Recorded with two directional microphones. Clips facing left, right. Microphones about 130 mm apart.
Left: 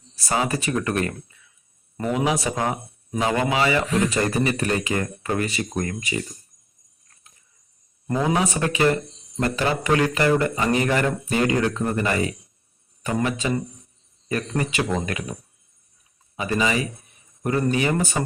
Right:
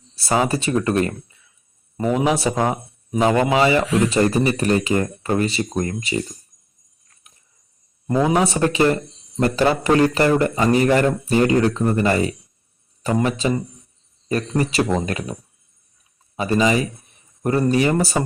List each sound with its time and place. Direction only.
0.3 s speech: 30° right (ahead or behind)
2.2 s a man's voice: 30° right (ahead or behind)
8.3 s a man's voice: 30° right (ahead or behind)